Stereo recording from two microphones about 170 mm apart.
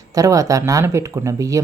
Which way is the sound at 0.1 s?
20° right (ahead or behind).